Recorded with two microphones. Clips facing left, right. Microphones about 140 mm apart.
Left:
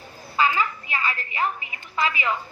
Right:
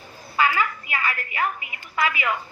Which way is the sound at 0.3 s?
25° left (ahead or behind).